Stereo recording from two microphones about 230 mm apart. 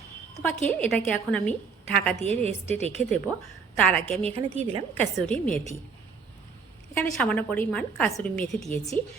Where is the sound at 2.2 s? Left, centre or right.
Right.